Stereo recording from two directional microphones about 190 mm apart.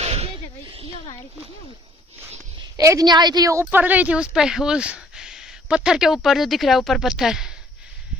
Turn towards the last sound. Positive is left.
turn(degrees=-5)  # may be behind; listen again after turning